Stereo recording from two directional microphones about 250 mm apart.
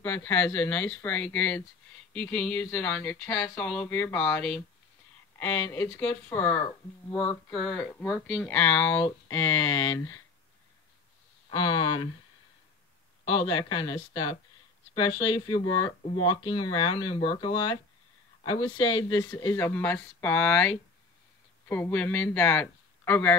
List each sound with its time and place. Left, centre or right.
0.0 s speech: centre
11.5 s speech: left
13.2 s speech: left
18.8 s speech: centre